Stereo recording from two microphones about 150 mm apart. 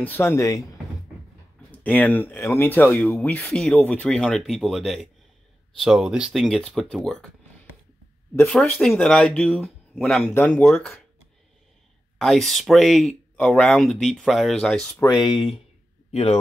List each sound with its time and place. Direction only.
0.0 s speech: 15° left (ahead or behind)
1.7 s speech: 10° left (ahead or behind)
8.8 s speech: 5° left (ahead or behind)
12.2 s speech: centre (ahead or behind)
15.0 s speech: 25° left (ahead or behind)
16.1 s a man's voice: 45° left (ahead or behind)